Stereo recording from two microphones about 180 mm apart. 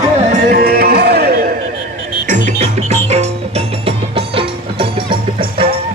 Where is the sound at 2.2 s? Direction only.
45° right (ahead or behind).